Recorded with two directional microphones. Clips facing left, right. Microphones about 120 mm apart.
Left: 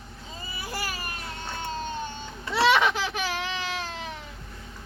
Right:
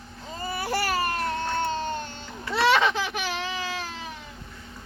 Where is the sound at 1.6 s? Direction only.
85° right.